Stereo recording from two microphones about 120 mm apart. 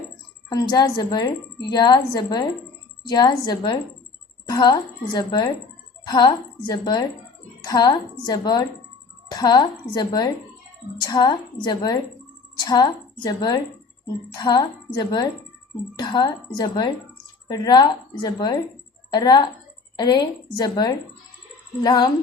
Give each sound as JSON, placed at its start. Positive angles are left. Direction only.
{"t": 0.5, "sound": "speech", "side_deg": 35}